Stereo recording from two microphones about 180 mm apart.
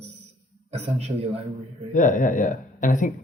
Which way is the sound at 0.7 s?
35° right (ahead or behind).